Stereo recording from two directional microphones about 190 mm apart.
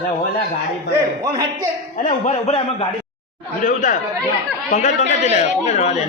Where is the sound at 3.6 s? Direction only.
45° left (ahead or behind).